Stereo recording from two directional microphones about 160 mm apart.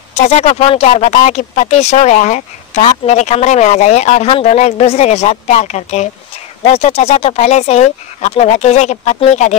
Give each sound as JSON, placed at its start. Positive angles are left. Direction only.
{"t": 0.1, "sound": "speech", "side_deg": 45}